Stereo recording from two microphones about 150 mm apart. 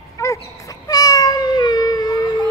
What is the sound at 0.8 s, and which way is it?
Cat, 25° left (ahead or behind).